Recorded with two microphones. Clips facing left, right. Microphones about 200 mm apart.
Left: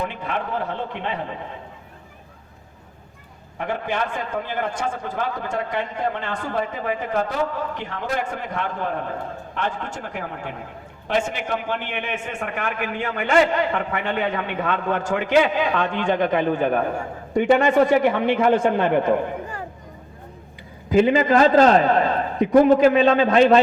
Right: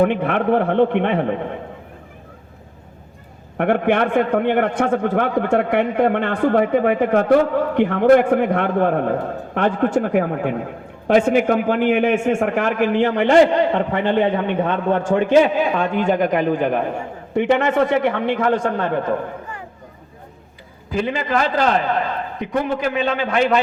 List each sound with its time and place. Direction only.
0.0 s a man's voice: 60° right (ahead or behind)
3.6 s a man's voice: 60° right (ahead or behind); by 15.1 s 30° right (ahead or behind)
15.7 s a man's voice: 5° right (ahead or behind); by 19.2 s 15° left (ahead or behind)
20.9 s a man's voice: 20° left (ahead or behind)